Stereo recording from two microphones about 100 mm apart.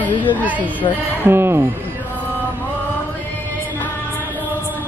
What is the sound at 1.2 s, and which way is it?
Speech, 25° right (ahead or behind).